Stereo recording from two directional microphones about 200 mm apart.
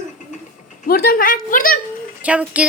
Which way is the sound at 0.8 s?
50° left (ahead or behind).